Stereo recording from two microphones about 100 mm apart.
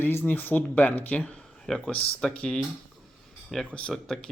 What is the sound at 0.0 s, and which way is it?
Speech, 20° left (ahead or behind).